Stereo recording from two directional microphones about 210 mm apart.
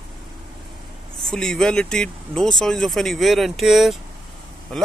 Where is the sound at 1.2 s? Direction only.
5° left (ahead or behind).